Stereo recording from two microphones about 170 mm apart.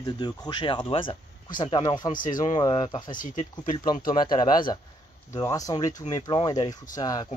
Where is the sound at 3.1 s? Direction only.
45° left (ahead or behind).